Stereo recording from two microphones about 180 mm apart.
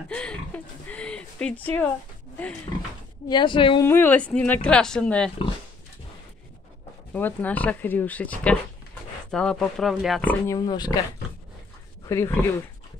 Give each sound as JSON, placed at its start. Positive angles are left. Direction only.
{"t": 0.1, "sound": "a sound", "side_deg": 5}
{"t": 2.7, "sound": "a woman's voice", "side_deg": 25}
{"t": 3.8, "sound": "a woman's voice", "side_deg": 10}
{"t": 7.2, "sound": "a woman's voice", "side_deg": 10}
{"t": 10.5, "sound": "a woman's voice", "side_deg": 20}
{"t": 12.1, "sound": "a woman's voice", "side_deg": 15}